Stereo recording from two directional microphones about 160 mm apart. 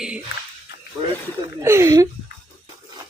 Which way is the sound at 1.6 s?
15° right (ahead or behind).